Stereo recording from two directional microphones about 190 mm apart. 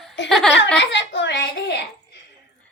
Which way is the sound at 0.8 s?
70° left (ahead or behind).